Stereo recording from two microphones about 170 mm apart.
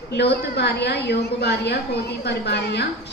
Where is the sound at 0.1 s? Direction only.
80° left.